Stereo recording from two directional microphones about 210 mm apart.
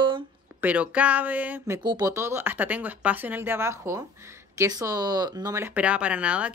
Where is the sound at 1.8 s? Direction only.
20° right (ahead or behind).